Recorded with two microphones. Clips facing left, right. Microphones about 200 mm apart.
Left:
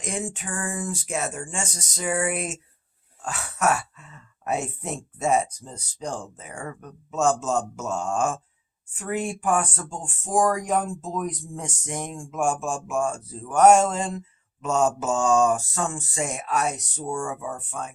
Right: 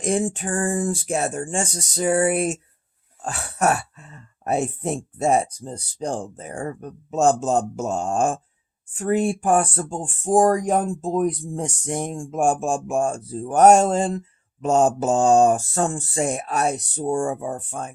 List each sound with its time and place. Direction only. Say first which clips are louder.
0.0 s speech: right 9 dB; 35° right (ahead or behind)